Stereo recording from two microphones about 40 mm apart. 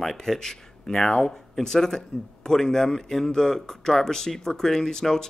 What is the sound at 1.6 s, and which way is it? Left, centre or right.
Speech, centre.